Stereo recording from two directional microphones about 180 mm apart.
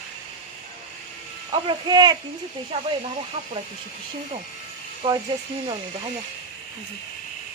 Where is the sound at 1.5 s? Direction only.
25° right (ahead or behind).